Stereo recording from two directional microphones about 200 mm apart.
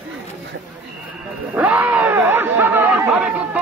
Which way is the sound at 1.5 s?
5° right (ahead or behind).